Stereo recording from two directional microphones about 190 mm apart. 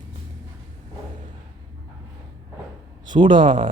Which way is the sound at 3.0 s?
25° right (ahead or behind).